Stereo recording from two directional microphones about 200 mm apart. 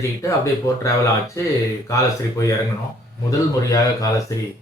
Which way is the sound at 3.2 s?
15° left (ahead or behind).